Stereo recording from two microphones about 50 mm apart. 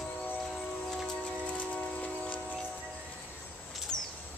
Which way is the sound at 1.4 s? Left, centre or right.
Left.